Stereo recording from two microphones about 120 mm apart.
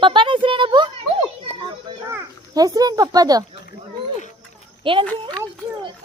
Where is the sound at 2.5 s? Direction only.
30° right (ahead or behind).